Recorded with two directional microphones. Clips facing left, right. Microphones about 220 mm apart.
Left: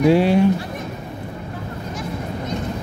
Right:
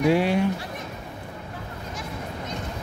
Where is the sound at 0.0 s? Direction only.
30° left (ahead or behind).